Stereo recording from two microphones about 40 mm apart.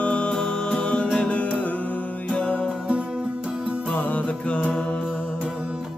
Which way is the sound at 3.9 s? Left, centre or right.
Left.